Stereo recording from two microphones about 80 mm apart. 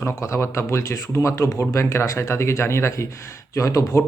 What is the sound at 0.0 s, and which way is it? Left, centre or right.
A man's voice, left.